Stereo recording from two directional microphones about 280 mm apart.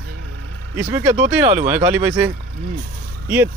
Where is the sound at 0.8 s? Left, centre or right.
Centre.